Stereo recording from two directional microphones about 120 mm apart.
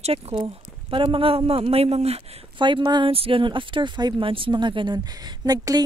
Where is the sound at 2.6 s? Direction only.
40° right (ahead or behind).